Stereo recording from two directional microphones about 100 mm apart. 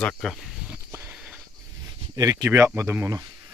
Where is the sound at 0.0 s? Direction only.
10° left (ahead or behind).